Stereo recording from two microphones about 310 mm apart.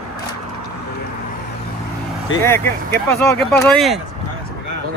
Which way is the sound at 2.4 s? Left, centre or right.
Centre.